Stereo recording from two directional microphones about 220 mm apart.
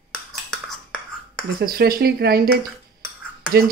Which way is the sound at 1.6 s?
40° right (ahead or behind).